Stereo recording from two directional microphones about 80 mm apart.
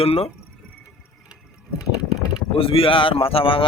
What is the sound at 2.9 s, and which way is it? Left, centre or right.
Speech, left.